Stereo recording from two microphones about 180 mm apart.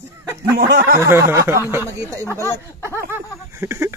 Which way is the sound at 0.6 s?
60° right (ahead or behind).